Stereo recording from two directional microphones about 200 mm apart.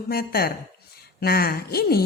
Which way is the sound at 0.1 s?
50° left (ahead or behind).